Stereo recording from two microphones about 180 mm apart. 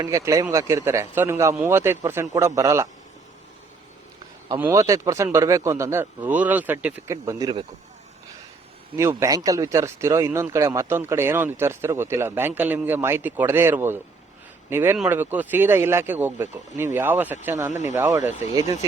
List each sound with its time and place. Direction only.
0.0 s a man's voice: 15° right (ahead or behind)
4.4 s speech: 15° right (ahead or behind)
9.0 s speech: 15° right (ahead or behind)
17.7 s speech: 40° left (ahead or behind)
17.9 s speech: 15° right (ahead or behind)